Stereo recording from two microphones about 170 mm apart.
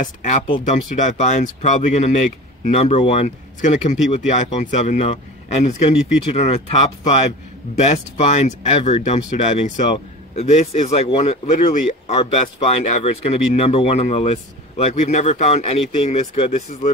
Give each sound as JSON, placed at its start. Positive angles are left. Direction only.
{"t": 0.0, "sound": "speech", "side_deg": 45}